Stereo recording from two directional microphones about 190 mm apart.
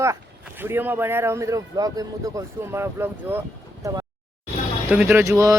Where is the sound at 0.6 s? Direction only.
10° right (ahead or behind).